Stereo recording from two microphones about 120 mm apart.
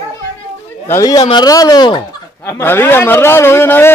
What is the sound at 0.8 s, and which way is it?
A man's voice, 25° left (ahead or behind).